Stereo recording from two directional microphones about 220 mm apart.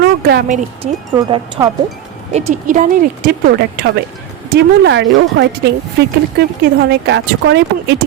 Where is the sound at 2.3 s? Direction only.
35° right (ahead or behind).